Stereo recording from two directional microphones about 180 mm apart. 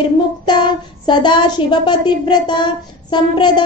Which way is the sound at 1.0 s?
25° left (ahead or behind).